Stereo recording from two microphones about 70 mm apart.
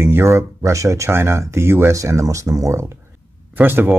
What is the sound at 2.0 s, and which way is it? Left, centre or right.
Speech, right.